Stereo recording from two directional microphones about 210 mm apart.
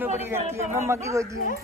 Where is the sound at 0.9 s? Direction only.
15° right (ahead or behind).